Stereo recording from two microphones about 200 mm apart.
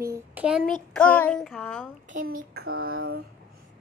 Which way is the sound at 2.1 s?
40° right (ahead or behind).